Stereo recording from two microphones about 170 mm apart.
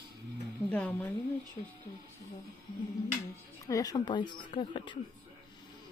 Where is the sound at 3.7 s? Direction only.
20° left (ahead or behind).